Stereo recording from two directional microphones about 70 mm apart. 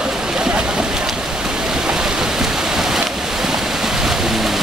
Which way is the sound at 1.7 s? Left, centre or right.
Centre.